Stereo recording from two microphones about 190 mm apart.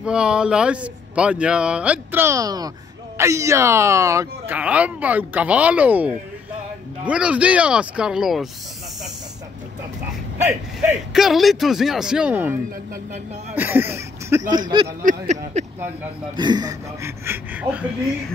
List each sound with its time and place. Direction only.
0.0 s speech: 5° right (ahead or behind)
10.3 s speech: 10° right (ahead or behind)
13.6 s speech: 10° right (ahead or behind)
15.5 s speech: 35° right (ahead or behind)
16.3 s speech: 20° right (ahead or behind)